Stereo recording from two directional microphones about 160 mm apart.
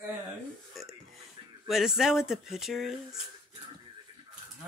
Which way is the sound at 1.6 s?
5° right (ahead or behind).